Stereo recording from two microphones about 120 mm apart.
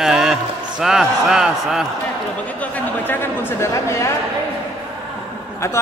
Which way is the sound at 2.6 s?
15° left (ahead or behind).